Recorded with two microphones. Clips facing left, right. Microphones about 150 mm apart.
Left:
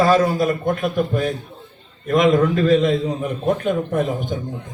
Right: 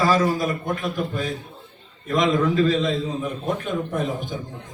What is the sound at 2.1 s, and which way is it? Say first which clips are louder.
A man's voice: left 5 dB; 55° left (ahead or behind).